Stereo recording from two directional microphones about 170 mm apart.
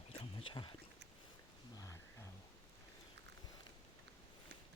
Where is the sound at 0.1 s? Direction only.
30° left (ahead or behind).